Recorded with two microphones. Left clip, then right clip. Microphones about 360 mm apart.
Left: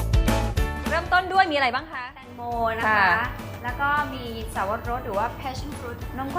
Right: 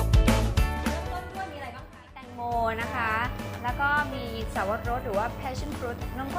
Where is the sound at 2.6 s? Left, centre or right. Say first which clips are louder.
Left 10 dB; right.